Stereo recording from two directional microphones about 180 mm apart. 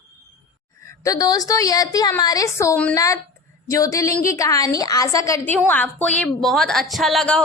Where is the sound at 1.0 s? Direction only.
20° left (ahead or behind).